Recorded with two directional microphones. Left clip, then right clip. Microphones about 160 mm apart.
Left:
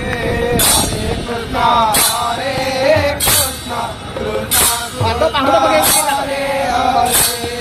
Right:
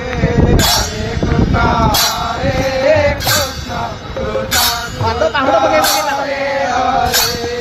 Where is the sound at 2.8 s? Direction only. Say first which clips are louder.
Right 2 dB; 30° right (ahead or behind).